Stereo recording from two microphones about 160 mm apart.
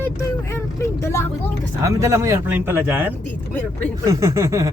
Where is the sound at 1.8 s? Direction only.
20° right (ahead or behind).